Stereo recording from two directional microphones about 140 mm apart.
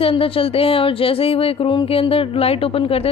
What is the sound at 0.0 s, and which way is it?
A woman's voice, 40° left (ahead or behind).